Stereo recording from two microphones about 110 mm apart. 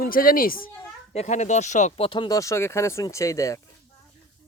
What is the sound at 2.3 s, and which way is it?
Speech, 30° left (ahead or behind).